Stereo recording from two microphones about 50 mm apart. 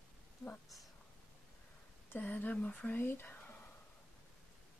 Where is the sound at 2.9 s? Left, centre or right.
Left.